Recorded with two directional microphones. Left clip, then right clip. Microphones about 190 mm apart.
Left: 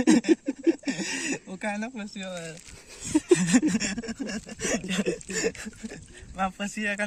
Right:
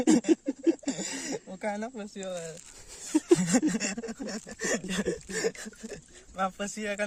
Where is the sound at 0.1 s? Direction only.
30° right (ahead or behind).